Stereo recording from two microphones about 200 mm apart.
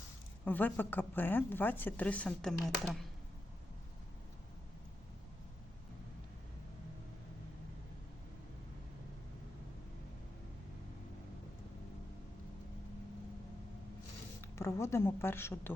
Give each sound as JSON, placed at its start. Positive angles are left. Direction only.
{"t": 0.4, "sound": "speech", "side_deg": 10}
{"t": 14.4, "sound": "speech", "side_deg": 15}